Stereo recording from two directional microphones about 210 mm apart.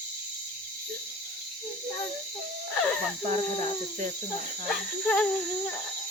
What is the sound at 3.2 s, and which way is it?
Speech, 35° right (ahead or behind).